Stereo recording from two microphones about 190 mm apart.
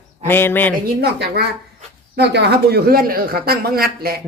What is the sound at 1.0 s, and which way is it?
Speech, 60° right (ahead or behind).